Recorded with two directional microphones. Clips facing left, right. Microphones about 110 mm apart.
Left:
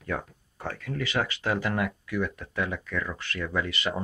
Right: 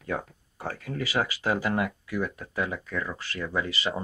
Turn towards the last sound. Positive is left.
turn(degrees=-5)  # may be behind; listen again after turning